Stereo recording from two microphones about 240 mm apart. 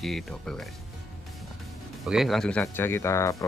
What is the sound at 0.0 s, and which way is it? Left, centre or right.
Speech, centre.